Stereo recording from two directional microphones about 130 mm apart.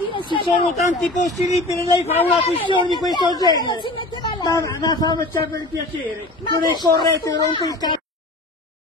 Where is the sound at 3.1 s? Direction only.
30° left (ahead or behind).